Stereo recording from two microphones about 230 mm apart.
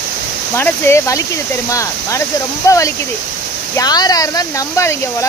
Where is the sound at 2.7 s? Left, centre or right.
Centre.